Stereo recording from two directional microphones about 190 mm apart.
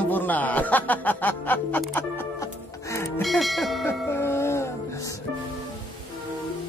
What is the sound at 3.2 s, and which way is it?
Church bell, centre (ahead or behind).